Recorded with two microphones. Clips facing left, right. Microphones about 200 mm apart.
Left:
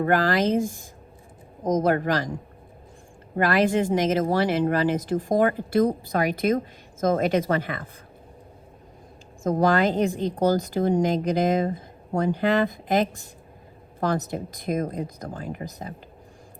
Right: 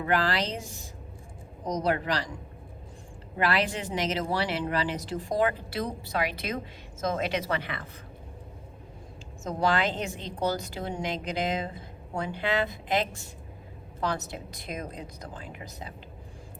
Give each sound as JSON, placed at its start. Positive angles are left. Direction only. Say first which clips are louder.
{"t": 0.0, "sound": "speech", "louder": "left 6 dB", "side_deg": 50}
{"t": 3.3, "sound": "speech", "louder": "left 7 dB", "side_deg": 50}
{"t": 9.4, "sound": "speech", "louder": "left 6 dB", "side_deg": 50}